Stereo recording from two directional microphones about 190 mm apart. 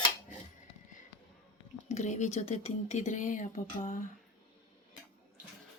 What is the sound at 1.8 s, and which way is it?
Speech, 35° left (ahead or behind).